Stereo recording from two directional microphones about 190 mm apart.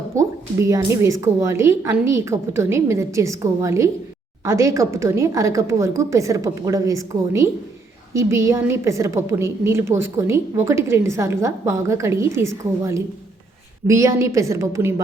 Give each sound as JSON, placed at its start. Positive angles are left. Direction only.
{"t": 0.1, "sound": "a woman's voice", "side_deg": -15}